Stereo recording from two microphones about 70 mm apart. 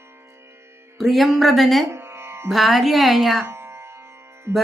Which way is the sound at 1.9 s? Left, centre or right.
Right.